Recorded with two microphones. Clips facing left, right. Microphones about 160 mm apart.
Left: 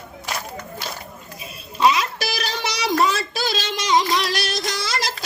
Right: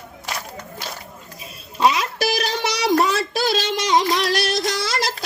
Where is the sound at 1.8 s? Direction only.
50° right (ahead or behind).